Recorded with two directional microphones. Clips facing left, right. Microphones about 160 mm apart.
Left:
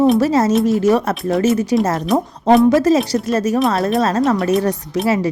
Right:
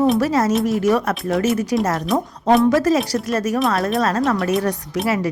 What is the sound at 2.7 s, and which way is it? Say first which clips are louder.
Speech: left 3 dB; 25° left (ahead or behind).